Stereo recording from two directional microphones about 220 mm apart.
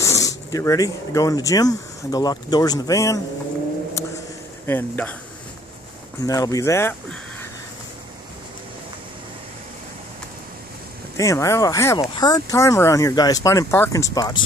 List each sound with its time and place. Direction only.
0.0 s speech: 15° left (ahead or behind)
4.6 s speech: 10° left (ahead or behind)
6.2 s speech: 15° left (ahead or behind)
11.1 s speech: 15° left (ahead or behind)